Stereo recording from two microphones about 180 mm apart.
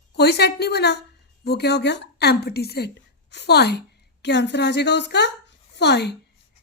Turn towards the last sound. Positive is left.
turn(degrees=70)  # may be behind; listen again after turning